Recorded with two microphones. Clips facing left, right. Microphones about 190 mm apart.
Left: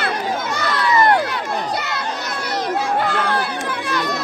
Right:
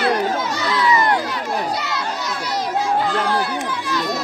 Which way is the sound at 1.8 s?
55° left (ahead or behind).